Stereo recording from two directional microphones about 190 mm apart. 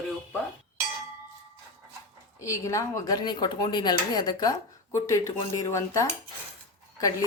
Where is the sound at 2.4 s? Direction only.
15° left (ahead or behind).